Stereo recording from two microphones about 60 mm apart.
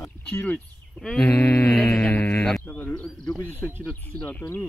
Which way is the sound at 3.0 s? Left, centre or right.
Centre.